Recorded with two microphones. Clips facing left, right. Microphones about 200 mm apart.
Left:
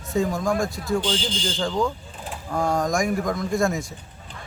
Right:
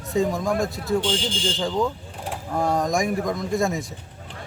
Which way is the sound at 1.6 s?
5° right (ahead or behind).